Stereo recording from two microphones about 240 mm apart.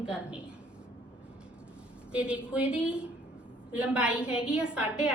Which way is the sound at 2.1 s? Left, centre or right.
Centre.